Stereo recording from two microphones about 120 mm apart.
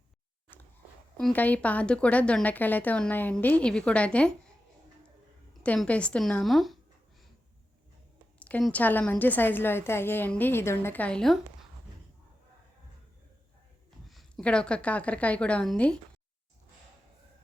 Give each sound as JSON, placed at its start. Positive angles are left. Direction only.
{"t": 1.3, "sound": "a woman's voice", "side_deg": 15}
{"t": 5.6, "sound": "a woman's voice", "side_deg": 10}
{"t": 8.4, "sound": "a sound", "side_deg": 10}
{"t": 8.7, "sound": "a woman's voice", "side_deg": 15}
{"t": 14.1, "sound": "a sound", "side_deg": 0}
{"t": 14.4, "sound": "a woman's voice", "side_deg": 10}